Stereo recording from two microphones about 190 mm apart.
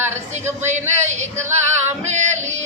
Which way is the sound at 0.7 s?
40° right (ahead or behind).